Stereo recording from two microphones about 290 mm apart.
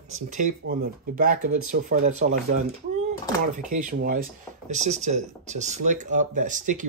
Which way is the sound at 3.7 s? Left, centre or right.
Right.